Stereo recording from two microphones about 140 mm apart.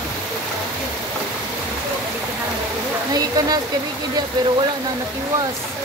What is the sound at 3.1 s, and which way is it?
Speech, 30° right (ahead or behind).